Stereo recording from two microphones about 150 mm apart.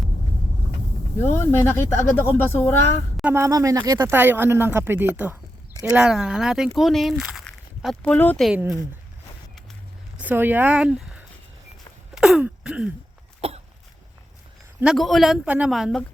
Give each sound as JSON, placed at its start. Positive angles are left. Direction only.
{"t": 1.4, "sound": "speech", "side_deg": 15}
{"t": 3.3, "sound": "speech", "side_deg": -20}
{"t": 8.4, "sound": "speech", "side_deg": 0}
{"t": 10.2, "sound": "speech", "side_deg": -10}
{"t": 12.1, "sound": "throat clearing", "side_deg": -5}
{"t": 13.4, "sound": "cough", "side_deg": -40}
{"t": 14.9, "sound": "speech", "side_deg": 0}